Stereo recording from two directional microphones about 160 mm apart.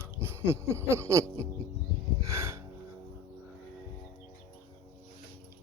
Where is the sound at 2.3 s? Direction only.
15° right (ahead or behind).